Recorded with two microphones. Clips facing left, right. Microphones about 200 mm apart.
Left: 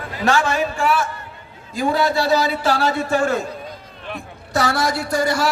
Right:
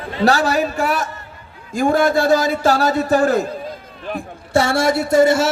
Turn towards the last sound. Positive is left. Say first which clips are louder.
# right 7 dB
turn(degrees=-25)  # may be behind; listen again after turning